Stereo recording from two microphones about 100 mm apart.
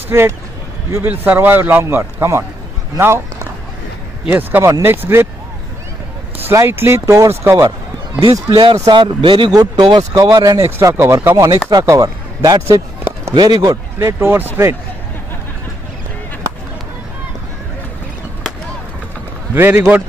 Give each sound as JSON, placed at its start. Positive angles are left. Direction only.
{"t": 0.1, "sound": "a man's voice", "side_deg": -25}
{"t": 4.3, "sound": "a man's voice", "side_deg": -20}
{"t": 6.5, "sound": "a man's voice", "side_deg": -25}
{"t": 8.2, "sound": "speech", "side_deg": -45}
{"t": 9.5, "sound": "speech", "side_deg": -45}
{"t": 10.3, "sound": "chopping", "side_deg": -40}
{"t": 10.8, "sound": "chopping", "side_deg": -30}
{"t": 11.8, "sound": "a man's voice", "side_deg": -30}
{"t": 12.6, "sound": "a sound", "side_deg": -30}
{"t": 13.3, "sound": "speech", "side_deg": -50}
{"t": 13.9, "sound": "a man's voice", "side_deg": -25}
{"t": 19.5, "sound": "a man's voice", "side_deg": -25}